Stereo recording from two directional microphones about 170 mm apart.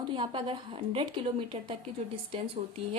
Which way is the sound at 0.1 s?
30° right (ahead or behind).